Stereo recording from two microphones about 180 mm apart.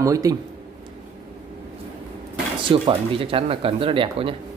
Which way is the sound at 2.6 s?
30° right (ahead or behind).